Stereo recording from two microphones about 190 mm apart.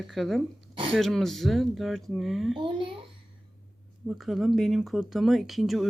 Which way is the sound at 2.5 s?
25° right (ahead or behind).